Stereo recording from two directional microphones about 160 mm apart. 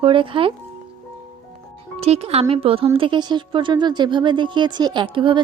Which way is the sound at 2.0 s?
40° right (ahead or behind).